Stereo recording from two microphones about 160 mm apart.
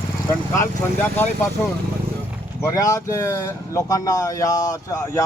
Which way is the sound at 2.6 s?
20° left (ahead or behind).